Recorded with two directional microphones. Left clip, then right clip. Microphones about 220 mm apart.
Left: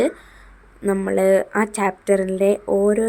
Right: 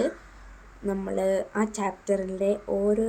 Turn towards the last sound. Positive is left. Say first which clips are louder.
# left 7 dB
turn(degrees=40)  # may be behind; listen again after turning